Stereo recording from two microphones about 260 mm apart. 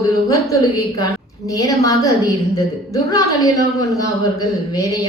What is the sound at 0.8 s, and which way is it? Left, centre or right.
Speech, centre.